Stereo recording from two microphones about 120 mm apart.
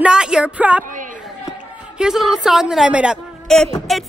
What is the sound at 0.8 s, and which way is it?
Speech, 90° right.